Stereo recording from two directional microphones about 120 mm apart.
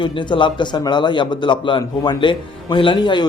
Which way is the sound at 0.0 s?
40° left (ahead or behind).